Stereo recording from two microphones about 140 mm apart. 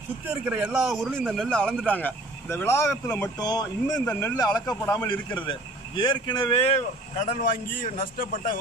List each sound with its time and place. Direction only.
0.3 s speech: 10° right (ahead or behind); by 3.3 s 15° left (ahead or behind)
3.3 s speech: 25° left (ahead or behind)
4.0 s speech: 10° left (ahead or behind)
4.9 s speech: 35° left (ahead or behind); by 8.5 s 90° left